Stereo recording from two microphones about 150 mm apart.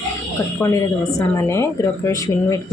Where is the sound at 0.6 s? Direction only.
10° left (ahead or behind).